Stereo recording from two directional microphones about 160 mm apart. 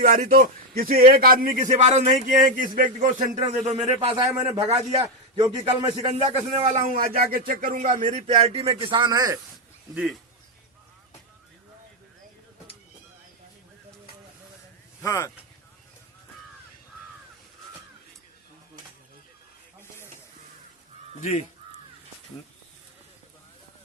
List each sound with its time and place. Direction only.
0.0 s a man's voice: 60° right (ahead or behind); by 6.1 s 35° right (ahead or behind)
6.7 s a man's voice: 60° right (ahead or behind)
8.3 s a man's voice: 35° right (ahead or behind)
9.9 s speech: 5° right (ahead or behind)
15.0 s speech: 15° left (ahead or behind)
21.2 s speech: 50° left (ahead or behind)